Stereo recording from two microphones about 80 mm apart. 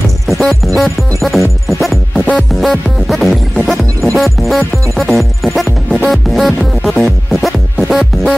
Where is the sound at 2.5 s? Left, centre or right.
Centre.